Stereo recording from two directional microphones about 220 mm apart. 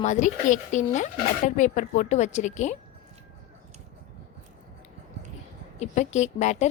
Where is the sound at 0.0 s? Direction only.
35° left (ahead or behind).